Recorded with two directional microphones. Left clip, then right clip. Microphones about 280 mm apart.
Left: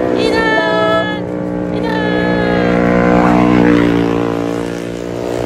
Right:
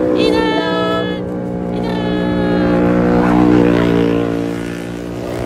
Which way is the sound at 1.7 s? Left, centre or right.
Left.